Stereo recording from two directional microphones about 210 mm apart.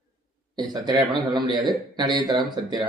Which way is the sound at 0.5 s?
20° right (ahead or behind).